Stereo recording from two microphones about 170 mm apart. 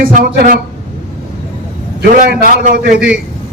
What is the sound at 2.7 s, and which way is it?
Speech, 65° right (ahead or behind).